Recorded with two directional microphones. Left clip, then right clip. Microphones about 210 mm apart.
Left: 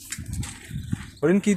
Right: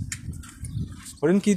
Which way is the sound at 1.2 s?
Centre (ahead or behind).